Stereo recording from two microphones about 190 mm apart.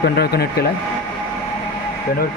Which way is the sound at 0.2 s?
55° left (ahead or behind).